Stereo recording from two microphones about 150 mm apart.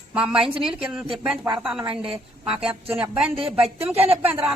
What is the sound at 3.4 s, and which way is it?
Speech, 40° right (ahead or behind).